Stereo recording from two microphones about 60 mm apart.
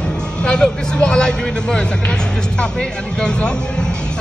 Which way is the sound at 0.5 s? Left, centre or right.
Centre.